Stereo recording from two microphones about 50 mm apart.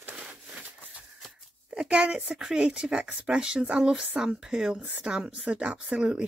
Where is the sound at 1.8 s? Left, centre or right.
Right.